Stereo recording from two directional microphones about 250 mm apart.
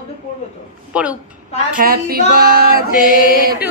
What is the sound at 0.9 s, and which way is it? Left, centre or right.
Speech, centre.